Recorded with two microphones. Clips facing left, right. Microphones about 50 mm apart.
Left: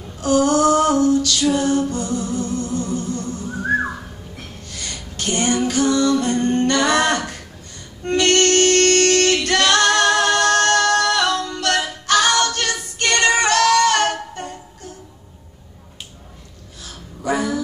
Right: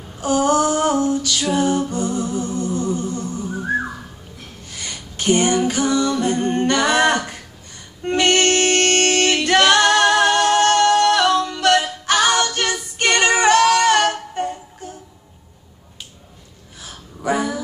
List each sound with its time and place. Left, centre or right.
0.2 s female singing: centre
4.6 s female singing: centre
8.0 s music: centre
10.7 s singing: centre
11.1 s music: centre
12.5 s female singing: centre
13.4 s music: right
17.2 s a sound: right